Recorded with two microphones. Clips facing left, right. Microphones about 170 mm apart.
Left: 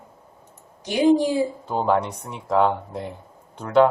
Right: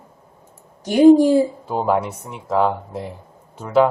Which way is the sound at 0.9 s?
45° right (ahead or behind).